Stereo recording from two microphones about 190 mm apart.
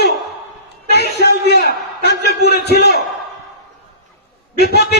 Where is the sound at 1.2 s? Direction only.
60° left (ahead or behind).